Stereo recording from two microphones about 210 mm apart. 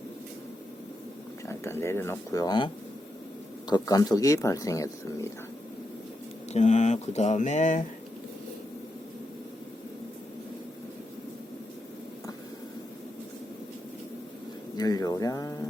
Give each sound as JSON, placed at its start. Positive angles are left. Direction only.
{"t": 1.5, "sound": "speech", "side_deg": 10}
{"t": 3.7, "sound": "speech", "side_deg": 20}
{"t": 6.5, "sound": "speech", "side_deg": 35}
{"t": 14.8, "sound": "speech", "side_deg": 20}